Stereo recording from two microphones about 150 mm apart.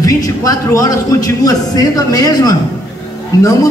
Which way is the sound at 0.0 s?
25° left (ahead or behind).